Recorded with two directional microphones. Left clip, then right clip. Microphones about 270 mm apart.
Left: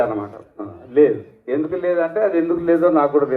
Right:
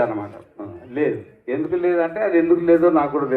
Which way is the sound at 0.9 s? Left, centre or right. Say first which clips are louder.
Left 8 dB; left.